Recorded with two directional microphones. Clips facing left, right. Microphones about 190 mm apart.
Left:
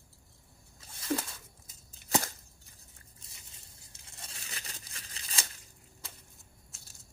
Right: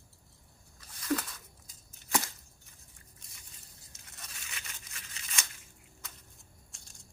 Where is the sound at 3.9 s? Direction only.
30° left (ahead or behind).